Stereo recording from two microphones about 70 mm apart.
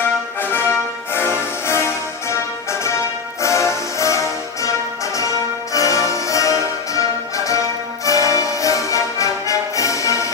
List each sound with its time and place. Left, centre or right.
0.5 s music: left
3.4 s music: left
5.7 s music: left